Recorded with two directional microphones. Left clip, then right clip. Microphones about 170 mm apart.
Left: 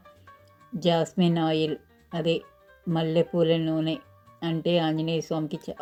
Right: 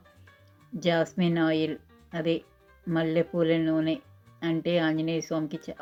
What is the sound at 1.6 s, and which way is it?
Music, 35° left (ahead or behind).